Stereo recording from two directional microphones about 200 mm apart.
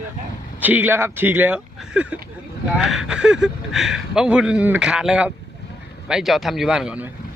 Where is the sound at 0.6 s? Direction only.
10° right (ahead or behind).